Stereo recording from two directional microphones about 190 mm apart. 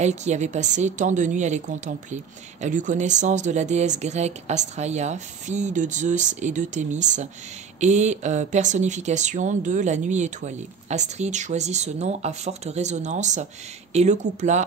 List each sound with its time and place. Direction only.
0.0 s speech: 35° right (ahead or behind)